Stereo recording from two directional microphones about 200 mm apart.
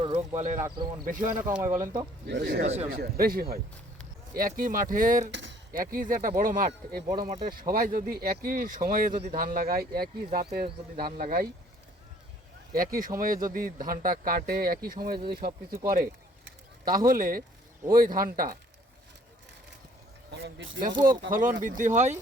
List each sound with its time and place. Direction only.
0.0 s a sound: 35° right (ahead or behind)
1.0 s speech: 45° right (ahead or behind)
1.5 s speech: 15° right (ahead or behind)
2.2 s speech: 55° right (ahead or behind)
5.3 s a sound: 65° right (ahead or behind)
5.7 s speech: 45° right (ahead or behind)
12.7 s speech: 45° right (ahead or behind)
16.8 s speech: 45° right (ahead or behind)
20.3 s speech: 65° right (ahead or behind)
21.2 s speech: 40° right (ahead or behind)